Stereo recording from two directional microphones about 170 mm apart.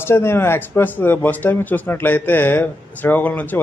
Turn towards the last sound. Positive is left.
turn(degrees=10)  # may be behind; listen again after turning